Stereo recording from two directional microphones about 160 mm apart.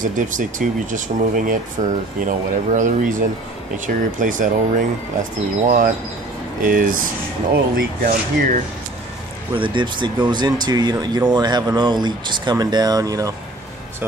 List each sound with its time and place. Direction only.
0.0 s speech: 55° right (ahead or behind)
6.6 s speech: 60° right (ahead or behind)
9.5 s speech: 30° right (ahead or behind)